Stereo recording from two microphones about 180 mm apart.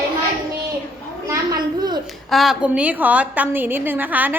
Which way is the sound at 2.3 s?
Centre (ahead or behind).